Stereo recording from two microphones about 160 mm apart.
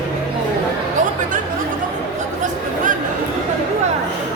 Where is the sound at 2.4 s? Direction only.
55° right (ahead or behind).